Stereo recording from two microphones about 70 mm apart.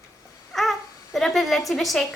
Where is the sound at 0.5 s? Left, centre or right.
Centre.